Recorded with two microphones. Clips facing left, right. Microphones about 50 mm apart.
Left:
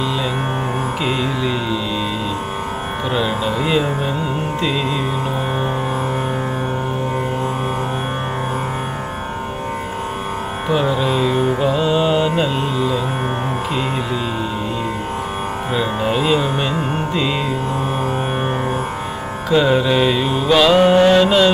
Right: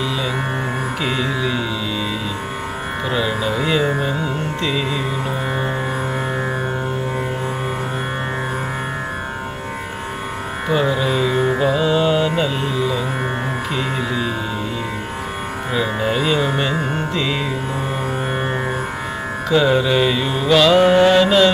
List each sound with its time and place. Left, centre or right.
3.2 s music: centre
10.7 s music: centre
15.7 s music: centre
19.5 s music: centre